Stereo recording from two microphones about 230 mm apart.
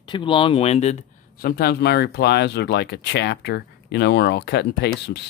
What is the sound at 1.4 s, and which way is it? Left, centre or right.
Speech, left.